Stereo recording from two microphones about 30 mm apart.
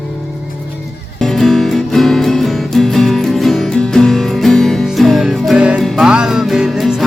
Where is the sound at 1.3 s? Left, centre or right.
Centre.